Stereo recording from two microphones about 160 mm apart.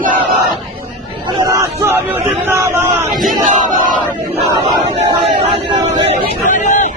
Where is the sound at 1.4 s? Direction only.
15° right (ahead or behind).